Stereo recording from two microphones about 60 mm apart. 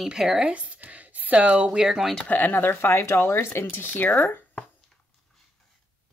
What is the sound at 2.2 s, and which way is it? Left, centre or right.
Speech, left.